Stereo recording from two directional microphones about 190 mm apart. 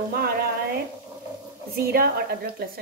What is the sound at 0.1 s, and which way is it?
Frying, 55° right (ahead or behind).